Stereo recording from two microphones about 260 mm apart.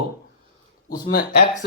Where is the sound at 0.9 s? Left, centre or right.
Left.